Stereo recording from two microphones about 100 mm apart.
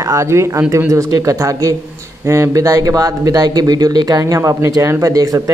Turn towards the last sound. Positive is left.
turn(degrees=-35)  # may be behind; listen again after turning